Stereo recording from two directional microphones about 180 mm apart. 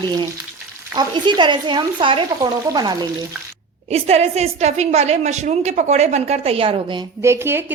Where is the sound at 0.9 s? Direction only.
25° right (ahead or behind).